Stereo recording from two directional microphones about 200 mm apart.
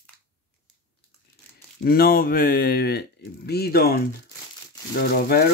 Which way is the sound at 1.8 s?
50° left (ahead or behind).